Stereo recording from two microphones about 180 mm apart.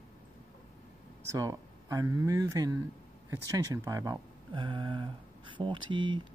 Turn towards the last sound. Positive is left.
turn(degrees=-25)  # may be behind; listen again after turning